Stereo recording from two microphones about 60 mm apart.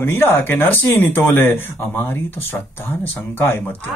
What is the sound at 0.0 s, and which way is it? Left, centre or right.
A man's voice, left.